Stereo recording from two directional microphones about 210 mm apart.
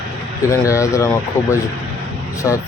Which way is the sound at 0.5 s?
15° left (ahead or behind).